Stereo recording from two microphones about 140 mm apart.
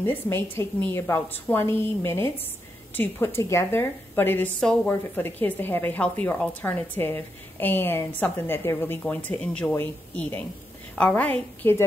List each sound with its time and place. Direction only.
0.0 s a woman's voice: 15° left (ahead or behind)